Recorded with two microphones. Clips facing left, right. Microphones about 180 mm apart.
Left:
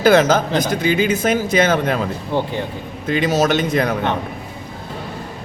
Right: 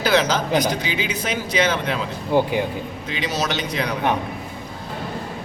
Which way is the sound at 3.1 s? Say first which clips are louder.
Left 9 dB; 50° left (ahead or behind).